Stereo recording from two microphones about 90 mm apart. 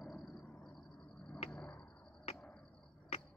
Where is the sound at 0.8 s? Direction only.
15° left (ahead or behind).